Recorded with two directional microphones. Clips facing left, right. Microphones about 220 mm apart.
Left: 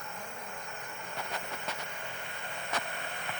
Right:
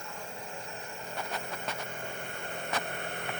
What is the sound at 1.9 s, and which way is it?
Vehicle, 45° right (ahead or behind).